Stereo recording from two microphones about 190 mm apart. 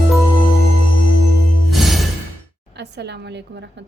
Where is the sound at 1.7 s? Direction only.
Centre (ahead or behind).